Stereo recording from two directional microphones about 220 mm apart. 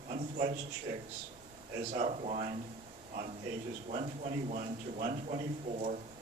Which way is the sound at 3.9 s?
30° right (ahead or behind).